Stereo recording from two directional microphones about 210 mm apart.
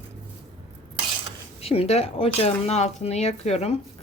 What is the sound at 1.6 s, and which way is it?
A woman's voice, 30° left (ahead or behind).